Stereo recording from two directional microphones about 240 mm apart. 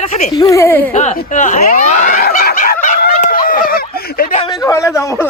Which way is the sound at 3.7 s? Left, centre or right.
Left.